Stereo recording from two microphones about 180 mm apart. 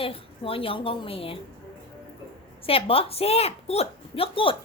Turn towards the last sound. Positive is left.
turn(degrees=30)  # may be behind; listen again after turning